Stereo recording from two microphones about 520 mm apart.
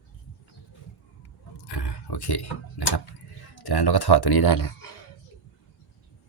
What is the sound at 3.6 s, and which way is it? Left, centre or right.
Speech, left.